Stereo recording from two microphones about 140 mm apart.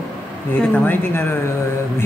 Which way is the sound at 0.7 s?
15° left (ahead or behind).